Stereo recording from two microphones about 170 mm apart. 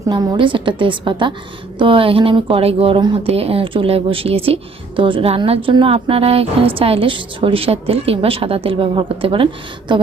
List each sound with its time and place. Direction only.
0.1 s a woman's voice: 25° right (ahead or behind)